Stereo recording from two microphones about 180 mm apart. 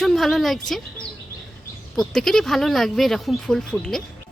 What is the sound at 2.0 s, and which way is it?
A woman's voice, centre (ahead or behind).